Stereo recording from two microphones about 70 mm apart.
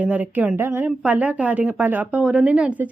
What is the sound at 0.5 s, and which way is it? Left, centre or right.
Speech, right.